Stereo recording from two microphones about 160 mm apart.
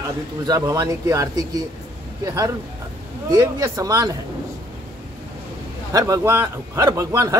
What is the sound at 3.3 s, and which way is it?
Speech, 20° right (ahead or behind).